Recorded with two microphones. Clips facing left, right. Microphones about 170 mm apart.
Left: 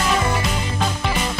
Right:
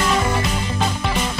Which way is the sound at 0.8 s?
Centre (ahead or behind).